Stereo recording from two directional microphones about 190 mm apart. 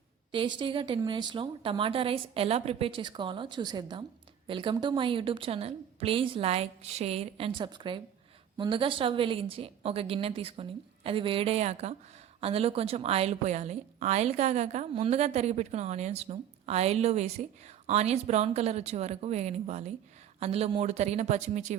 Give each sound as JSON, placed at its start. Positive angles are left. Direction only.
{"t": 0.3, "sound": "a woman's voice", "side_deg": -25}